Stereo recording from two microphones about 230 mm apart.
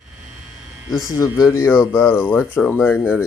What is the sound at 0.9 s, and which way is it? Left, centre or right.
Speech, centre.